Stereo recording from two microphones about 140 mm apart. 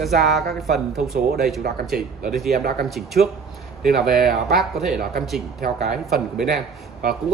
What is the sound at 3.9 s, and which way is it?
Speech, 90° right.